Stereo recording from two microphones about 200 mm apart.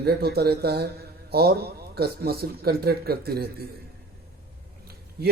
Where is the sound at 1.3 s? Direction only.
50° right (ahead or behind).